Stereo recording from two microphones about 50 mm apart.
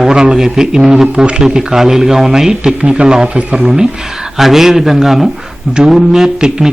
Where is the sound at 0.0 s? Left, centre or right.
Centre.